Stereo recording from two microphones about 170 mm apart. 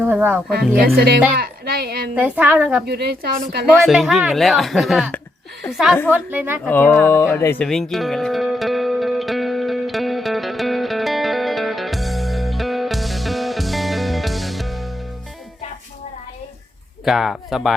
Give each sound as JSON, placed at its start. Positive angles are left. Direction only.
{"t": 0.0, "sound": "speech", "side_deg": -10}
{"t": 0.9, "sound": "a woman's voice", "side_deg": -65}
{"t": 2.1, "sound": "a woman's voice", "side_deg": -10}
{"t": 2.8, "sound": "a woman's voice", "side_deg": -70}
{"t": 3.8, "sound": "a woman's voice", "side_deg": 0}
{"t": 6.7, "sound": "music", "side_deg": 10}
{"t": 17.1, "sound": "speech", "side_deg": 0}